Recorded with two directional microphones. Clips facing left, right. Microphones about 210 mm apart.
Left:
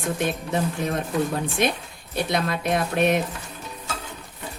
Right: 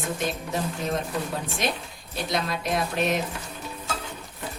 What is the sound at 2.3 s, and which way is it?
Speech, 55° left (ahead or behind).